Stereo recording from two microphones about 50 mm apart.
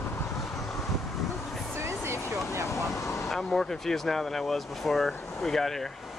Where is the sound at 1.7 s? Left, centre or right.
Right.